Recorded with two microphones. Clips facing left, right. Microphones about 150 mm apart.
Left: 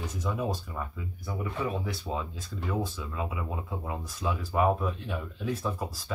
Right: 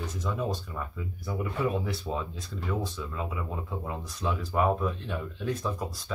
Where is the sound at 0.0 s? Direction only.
10° left (ahead or behind).